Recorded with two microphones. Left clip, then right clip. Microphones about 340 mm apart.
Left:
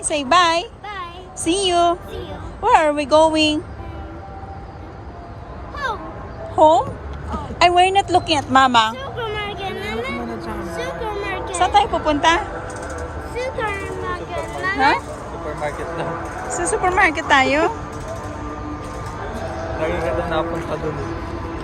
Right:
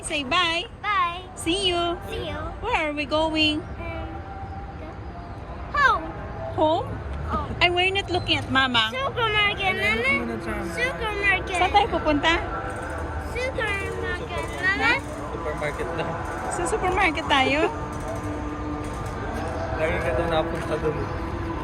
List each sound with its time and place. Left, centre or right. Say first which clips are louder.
0.1 s a woman's voice: left 8 dB; centre
5.7 s a sound: right 6 dB; centre
6.6 s speech: left 10 dB; centre
13.3 s a sound: left 3 dB; left
16.6 s speech: left 7 dB; centre
19.8 s speech: left 3 dB; left